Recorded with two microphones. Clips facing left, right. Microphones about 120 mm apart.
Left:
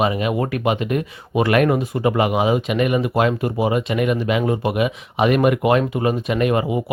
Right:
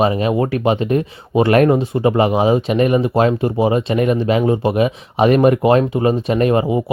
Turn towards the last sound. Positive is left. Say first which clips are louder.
# right 4 dB
turn(degrees=-30)  # may be behind; listen again after turning